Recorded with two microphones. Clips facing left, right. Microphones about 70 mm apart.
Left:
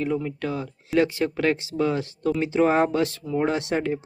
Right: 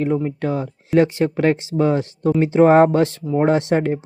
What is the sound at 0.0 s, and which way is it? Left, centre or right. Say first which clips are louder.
Speech: right 6 dB; right.